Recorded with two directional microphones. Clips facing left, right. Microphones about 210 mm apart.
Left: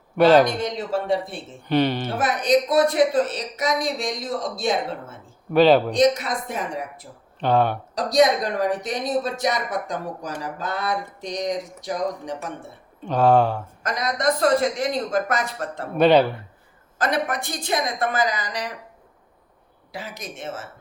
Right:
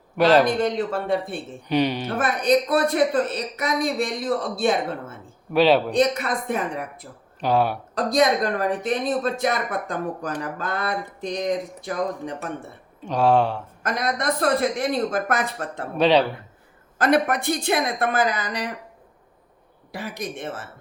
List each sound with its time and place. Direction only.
0.2 s speech: centre (ahead or behind)
0.6 s speech: 55° right (ahead or behind)
1.7 s speech: centre (ahead or behind)
2.1 s speech: 55° right (ahead or behind)
5.5 s speech: centre (ahead or behind)
5.9 s speech: 60° right (ahead or behind)
7.3 s speech: 5° right (ahead or behind)
7.9 s speech: 55° right (ahead or behind)
13.0 s speech: 5° left (ahead or behind)
13.8 s speech: 55° right (ahead or behind)
16.0 s speech: 5° left (ahead or behind)
17.0 s speech: 60° right (ahead or behind)
19.9 s speech: 60° right (ahead or behind)